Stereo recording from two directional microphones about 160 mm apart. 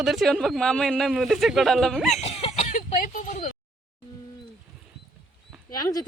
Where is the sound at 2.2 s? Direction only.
40° left (ahead or behind).